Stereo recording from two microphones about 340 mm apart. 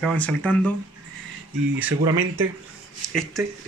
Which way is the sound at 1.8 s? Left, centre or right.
Centre.